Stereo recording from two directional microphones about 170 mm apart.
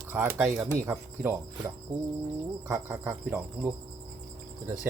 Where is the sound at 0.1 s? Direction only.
10° right (ahead or behind).